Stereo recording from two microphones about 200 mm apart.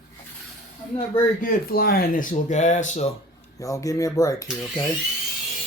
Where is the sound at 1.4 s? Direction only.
50° left (ahead or behind).